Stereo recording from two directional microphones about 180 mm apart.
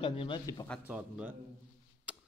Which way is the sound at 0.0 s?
30° left (ahead or behind).